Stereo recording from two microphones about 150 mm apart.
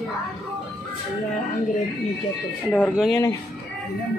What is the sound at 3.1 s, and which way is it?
Speech, 20° left (ahead or behind).